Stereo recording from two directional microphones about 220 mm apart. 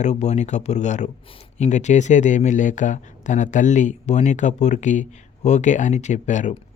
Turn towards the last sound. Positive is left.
turn(degrees=35)  # may be behind; listen again after turning